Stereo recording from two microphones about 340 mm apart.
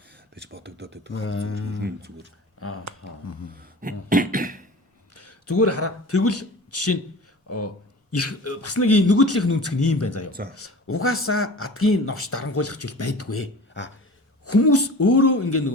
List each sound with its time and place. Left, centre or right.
0.3 s speech: right
1.1 s speech: left
1.8 s speech: right
2.6 s speech: left
3.5 s cough: right
5.1 s a man's voice: left
8.1 s a man's voice: left